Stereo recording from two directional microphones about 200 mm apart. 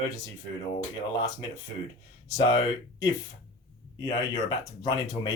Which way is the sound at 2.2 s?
20° left (ahead or behind).